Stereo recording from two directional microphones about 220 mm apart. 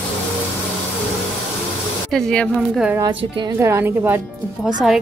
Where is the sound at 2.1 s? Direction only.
5° left (ahead or behind).